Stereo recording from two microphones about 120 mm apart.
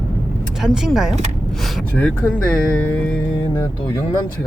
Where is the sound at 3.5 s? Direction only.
25° left (ahead or behind).